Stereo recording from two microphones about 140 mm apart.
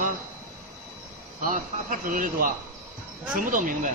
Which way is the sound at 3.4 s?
70° right (ahead or behind).